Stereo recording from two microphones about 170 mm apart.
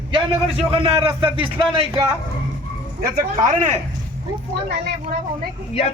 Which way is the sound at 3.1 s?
50° right (ahead or behind).